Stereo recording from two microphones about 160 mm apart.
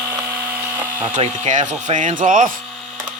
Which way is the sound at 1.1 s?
45° right (ahead or behind).